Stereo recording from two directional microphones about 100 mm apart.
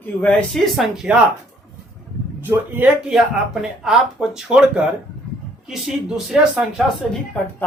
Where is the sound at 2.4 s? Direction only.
15° right (ahead or behind).